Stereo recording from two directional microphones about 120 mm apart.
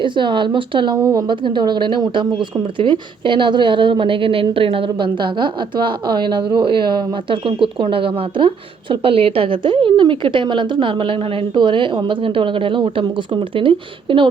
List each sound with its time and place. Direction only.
0.0 s a woman's voice: 40° right (ahead or behind)